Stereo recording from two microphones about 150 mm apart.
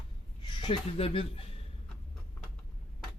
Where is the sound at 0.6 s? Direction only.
35° left (ahead or behind).